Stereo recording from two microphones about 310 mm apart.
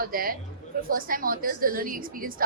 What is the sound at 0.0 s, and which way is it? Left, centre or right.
A woman's voice, right.